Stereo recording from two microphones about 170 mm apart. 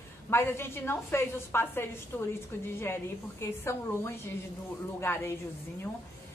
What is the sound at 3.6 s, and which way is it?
A woman's voice, 15° left (ahead or behind).